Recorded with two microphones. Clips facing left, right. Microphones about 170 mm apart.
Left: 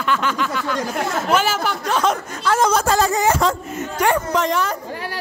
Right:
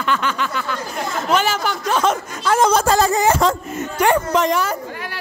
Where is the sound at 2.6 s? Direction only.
30° right (ahead or behind); by 4.7 s 10° right (ahead or behind).